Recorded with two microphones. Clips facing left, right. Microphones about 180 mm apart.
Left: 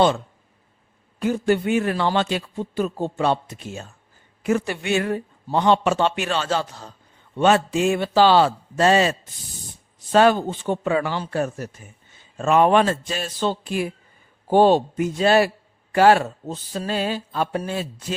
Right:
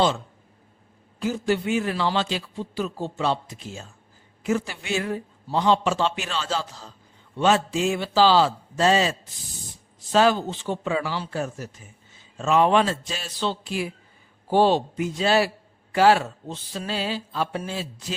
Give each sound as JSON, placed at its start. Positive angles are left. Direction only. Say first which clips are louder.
{"t": 1.2, "sound": "a man's voice", "louder": "left 4 dB", "side_deg": 55}